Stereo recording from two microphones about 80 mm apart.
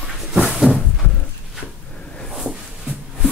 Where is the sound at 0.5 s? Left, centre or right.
Centre.